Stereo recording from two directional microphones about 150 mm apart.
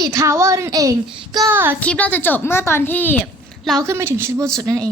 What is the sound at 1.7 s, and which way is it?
A woman's voice, 10° left (ahead or behind).